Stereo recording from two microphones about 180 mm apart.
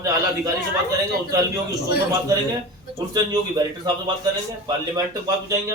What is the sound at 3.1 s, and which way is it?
A man's voice, 20° right (ahead or behind).